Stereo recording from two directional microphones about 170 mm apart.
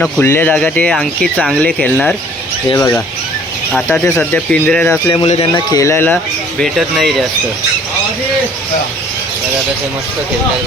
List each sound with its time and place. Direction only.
0.0 s speech: 10° left (ahead or behind)
2.7 s speech: 15° left (ahead or behind)
3.7 s speech: 5° left (ahead or behind)
5.2 s speech: 35° left (ahead or behind)
5.7 s speech: 15° left (ahead or behind)
6.6 s speech: centre (ahead or behind)